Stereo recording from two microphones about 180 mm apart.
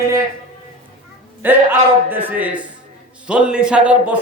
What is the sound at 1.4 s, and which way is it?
A man's voice, 10° right (ahead or behind).